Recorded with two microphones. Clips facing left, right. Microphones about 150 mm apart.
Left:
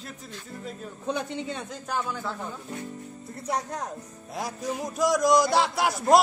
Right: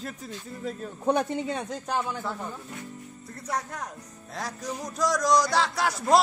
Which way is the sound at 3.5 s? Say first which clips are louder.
Left 1 dB; 35° left (ahead or behind).